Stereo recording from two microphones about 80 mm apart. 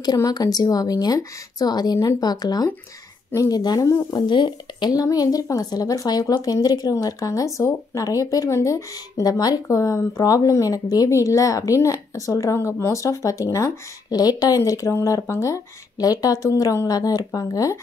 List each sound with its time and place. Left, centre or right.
0.0 s speech: left
4.3 s speech: left
5.0 s a woman's voice: left
14.1 s speech: left
14.6 s a woman's voice: left